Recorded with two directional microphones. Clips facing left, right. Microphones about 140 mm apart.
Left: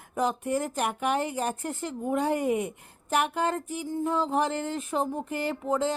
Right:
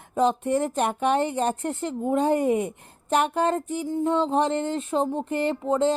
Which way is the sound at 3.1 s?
30° right (ahead or behind).